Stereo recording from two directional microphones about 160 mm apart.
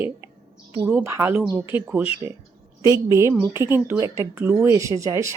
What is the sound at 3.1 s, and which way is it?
Speech, 20° right (ahead or behind).